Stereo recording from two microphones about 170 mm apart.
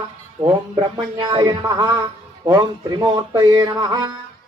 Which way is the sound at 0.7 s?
25° right (ahead or behind).